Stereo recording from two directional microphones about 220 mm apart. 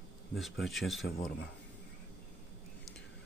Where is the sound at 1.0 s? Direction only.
45° left (ahead or behind).